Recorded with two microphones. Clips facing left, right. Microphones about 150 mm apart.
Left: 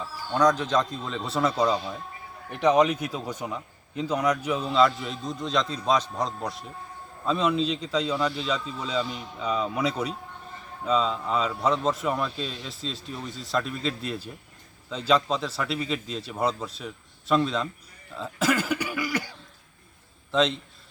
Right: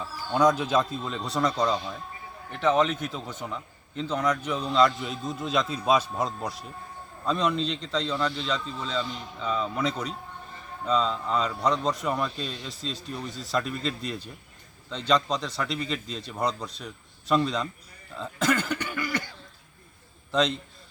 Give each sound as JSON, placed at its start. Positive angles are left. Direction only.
{"t": 0.3, "sound": "a man's voice", "side_deg": -10}